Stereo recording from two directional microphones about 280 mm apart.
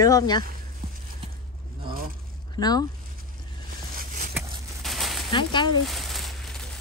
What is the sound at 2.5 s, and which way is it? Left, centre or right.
Speech, centre.